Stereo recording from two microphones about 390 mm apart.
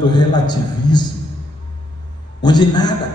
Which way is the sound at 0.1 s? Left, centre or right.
Centre.